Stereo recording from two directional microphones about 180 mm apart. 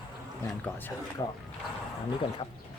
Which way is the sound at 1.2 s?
25° left (ahead or behind).